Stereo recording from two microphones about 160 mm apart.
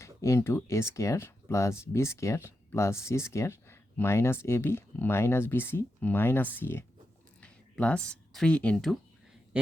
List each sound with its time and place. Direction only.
0.0 s speech: 20° left (ahead or behind); by 9.0 s centre (ahead or behind)